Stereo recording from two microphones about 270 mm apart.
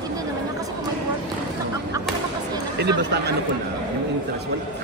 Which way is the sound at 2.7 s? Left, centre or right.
Right.